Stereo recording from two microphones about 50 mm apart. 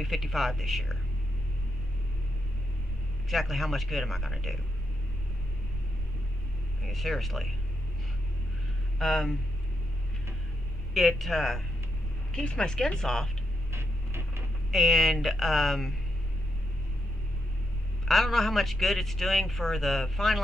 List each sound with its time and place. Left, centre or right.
0.0 s a man's voice: centre
3.3 s a man's voice: centre
6.8 s a man's voice: centre
8.9 s speech: centre
10.9 s a man's voice: centre
12.4 s speech: centre
13.7 s a sound: right
14.7 s a man's voice: centre
18.0 s a man's voice: centre